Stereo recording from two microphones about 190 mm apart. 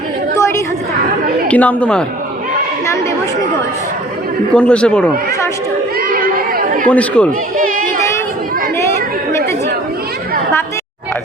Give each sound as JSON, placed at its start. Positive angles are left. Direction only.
{"t": 1.5, "sound": "speech", "side_deg": 5}
{"t": 4.5, "sound": "speech", "side_deg": 5}
{"t": 6.0, "sound": "chatter", "side_deg": -50}
{"t": 6.8, "sound": "speech", "side_deg": 5}
{"t": 7.5, "sound": "chatter", "side_deg": -45}